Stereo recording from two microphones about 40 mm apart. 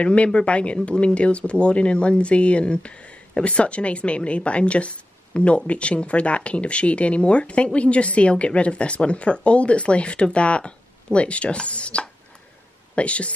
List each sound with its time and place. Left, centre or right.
0.0 s speech: left